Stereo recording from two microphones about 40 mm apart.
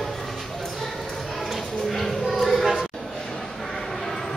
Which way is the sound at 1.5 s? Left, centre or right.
Centre.